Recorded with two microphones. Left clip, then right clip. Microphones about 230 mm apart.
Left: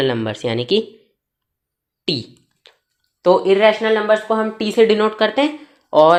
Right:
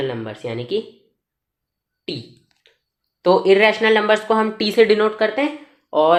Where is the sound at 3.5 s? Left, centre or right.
Centre.